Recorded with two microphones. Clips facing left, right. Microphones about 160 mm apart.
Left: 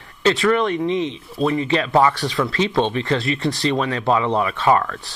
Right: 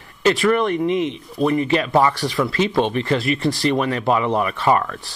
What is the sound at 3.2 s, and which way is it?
Speech, 25° left (ahead or behind).